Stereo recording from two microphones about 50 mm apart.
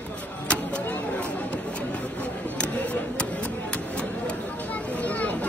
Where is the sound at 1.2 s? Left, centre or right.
Left.